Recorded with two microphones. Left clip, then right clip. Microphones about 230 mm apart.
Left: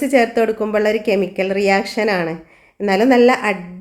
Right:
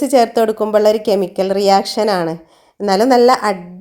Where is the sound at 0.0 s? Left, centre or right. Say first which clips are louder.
Right 2 dB; right.